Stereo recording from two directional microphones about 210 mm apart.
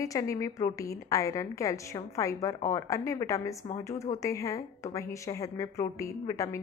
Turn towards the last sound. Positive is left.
turn(degrees=15)  # may be behind; listen again after turning